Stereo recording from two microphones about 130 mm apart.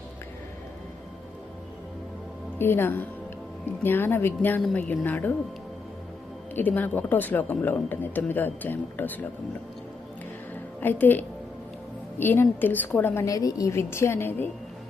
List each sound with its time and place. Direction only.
2.6 s speech: 15° left (ahead or behind)
6.5 s speech: 15° left (ahead or behind)
10.8 s a woman's voice: 15° left (ahead or behind)